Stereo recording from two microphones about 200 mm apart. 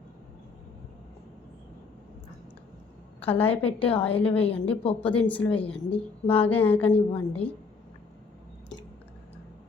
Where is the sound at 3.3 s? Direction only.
30° left (ahead or behind).